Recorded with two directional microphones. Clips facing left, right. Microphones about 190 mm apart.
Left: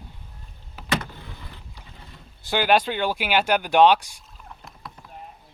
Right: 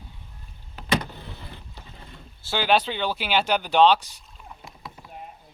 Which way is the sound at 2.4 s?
15° left (ahead or behind).